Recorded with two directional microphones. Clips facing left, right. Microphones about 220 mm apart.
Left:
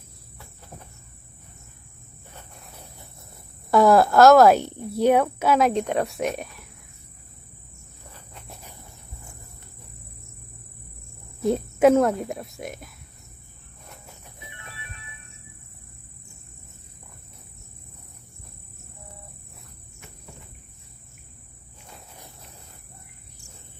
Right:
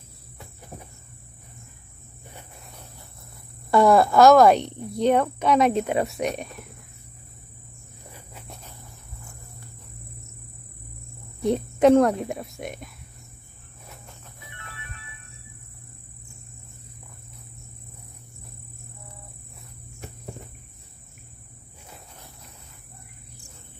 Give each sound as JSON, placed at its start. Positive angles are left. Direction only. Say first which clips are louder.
{"t": 3.7, "sound": "a woman's voice", "louder": "left 1 dB", "side_deg": 0}
{"t": 8.1, "sound": "cricket", "louder": "right 1 dB", "side_deg": -5}
{"t": 11.4, "sound": "a woman's voice", "louder": "even", "side_deg": 5}
{"t": 14.4, "sound": "music", "louder": "left 1 dB", "side_deg": 20}